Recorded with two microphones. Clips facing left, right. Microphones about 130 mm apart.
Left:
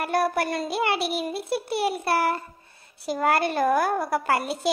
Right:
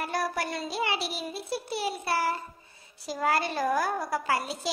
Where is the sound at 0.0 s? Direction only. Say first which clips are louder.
Left 6 dB; 60° left (ahead or behind).